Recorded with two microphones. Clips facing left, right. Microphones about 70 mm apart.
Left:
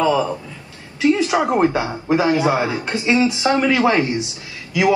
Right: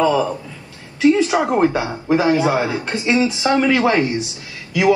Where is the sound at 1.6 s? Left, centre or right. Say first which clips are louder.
Right 1 dB; left.